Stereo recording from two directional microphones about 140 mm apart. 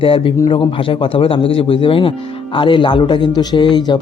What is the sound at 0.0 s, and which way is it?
A man's voice, 40° left (ahead or behind).